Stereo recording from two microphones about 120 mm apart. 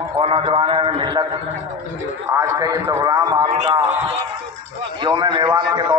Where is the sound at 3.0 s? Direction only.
35° right (ahead or behind).